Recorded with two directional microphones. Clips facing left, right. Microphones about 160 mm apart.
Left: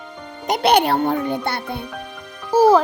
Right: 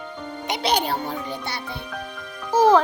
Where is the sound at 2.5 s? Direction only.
10° left (ahead or behind).